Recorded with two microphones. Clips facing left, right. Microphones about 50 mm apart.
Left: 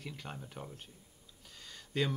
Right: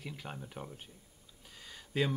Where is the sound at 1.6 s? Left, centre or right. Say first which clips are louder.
Right 1 dB; centre.